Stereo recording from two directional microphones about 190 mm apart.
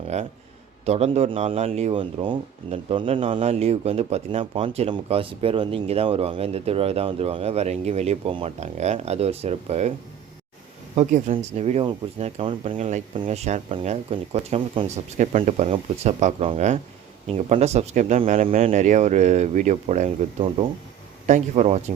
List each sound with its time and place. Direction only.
0.1 s speech: 35° right (ahead or behind)
10.9 s speech: 40° right (ahead or behind)